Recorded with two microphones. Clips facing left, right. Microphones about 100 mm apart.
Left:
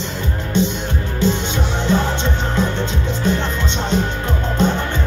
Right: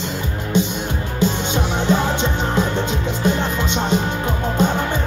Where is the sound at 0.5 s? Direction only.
15° right (ahead or behind).